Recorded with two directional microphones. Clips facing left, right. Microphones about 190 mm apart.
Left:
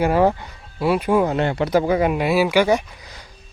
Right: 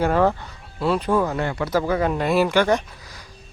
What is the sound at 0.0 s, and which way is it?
Speech, 10° left (ahead or behind).